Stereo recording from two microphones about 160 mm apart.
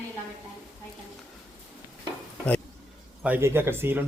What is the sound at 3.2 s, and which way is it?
Speech, 10° right (ahead or behind).